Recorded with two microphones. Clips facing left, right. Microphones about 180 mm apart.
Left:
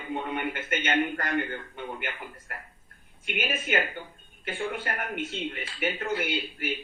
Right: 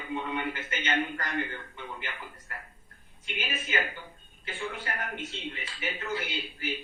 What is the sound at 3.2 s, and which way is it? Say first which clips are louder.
Speech: left 6 dB; 50° left (ahead or behind).